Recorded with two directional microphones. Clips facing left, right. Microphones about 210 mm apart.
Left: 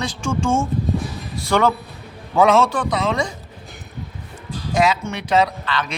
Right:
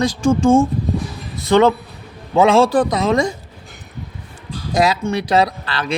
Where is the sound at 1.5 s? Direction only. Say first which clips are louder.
Right 5 dB; 20° right (ahead or behind); by 3.3 s 40° right (ahead or behind).